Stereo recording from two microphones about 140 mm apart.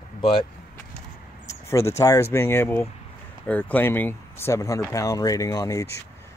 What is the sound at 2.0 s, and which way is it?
Speech, 20° left (ahead or behind).